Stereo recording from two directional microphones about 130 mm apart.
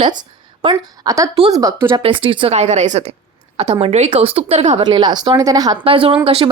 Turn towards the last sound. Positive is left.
turn(degrees=-45)  # may be behind; listen again after turning